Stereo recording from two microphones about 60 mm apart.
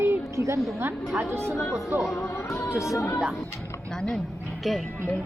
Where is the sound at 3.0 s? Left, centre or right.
Left.